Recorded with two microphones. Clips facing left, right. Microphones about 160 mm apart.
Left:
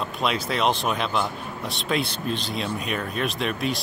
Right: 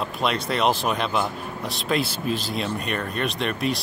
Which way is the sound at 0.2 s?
Centre (ahead or behind).